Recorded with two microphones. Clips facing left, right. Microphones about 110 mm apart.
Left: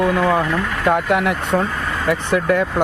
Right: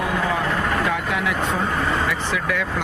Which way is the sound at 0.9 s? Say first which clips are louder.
Left 6 dB; 55° left (ahead or behind).